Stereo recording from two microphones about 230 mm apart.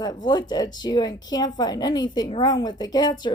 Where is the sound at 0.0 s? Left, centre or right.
Centre.